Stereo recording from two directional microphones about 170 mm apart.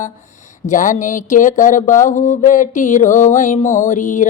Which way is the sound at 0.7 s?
50° left (ahead or behind).